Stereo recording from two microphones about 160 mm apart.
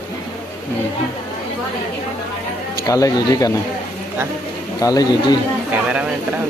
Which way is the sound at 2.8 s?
20° left (ahead or behind).